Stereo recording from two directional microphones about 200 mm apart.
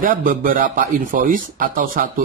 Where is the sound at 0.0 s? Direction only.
45° right (ahead or behind).